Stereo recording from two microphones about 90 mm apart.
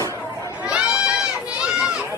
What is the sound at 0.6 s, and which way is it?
Goat, 10° right (ahead or behind).